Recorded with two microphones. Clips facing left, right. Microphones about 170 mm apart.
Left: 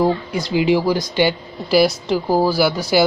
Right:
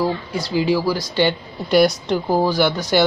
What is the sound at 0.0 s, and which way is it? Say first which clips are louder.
Speech: left 3 dB; 20° left (ahead or behind).